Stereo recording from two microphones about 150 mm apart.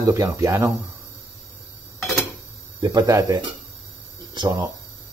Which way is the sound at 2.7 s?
25° right (ahead or behind).